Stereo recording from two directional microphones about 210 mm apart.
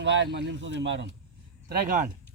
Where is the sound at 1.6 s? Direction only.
40° right (ahead or behind).